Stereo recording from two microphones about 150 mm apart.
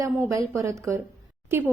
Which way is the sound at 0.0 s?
20° right (ahead or behind).